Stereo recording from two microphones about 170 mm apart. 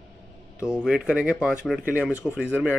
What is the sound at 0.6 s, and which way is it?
Speech, 5° right (ahead or behind).